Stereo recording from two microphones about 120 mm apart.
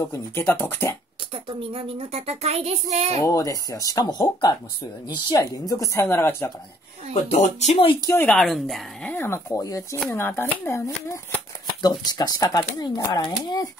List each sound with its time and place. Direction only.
0.0 s speech: 20° left (ahead or behind)
1.3 s speech: 50° right (ahead or behind)
3.2 s speech: 25° left (ahead or behind)
7.2 s speech: 75° left (ahead or behind)
7.7 s speech: 45° left (ahead or behind)
8.2 s speech: 5° left (ahead or behind)
9.1 s speech: 20° left (ahead or behind)
11.8 s speech: 35° left (ahead or behind)